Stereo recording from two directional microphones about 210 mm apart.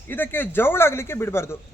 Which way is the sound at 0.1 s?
10° left (ahead or behind).